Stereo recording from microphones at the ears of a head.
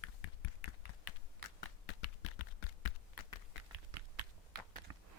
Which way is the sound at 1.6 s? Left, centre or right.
Left.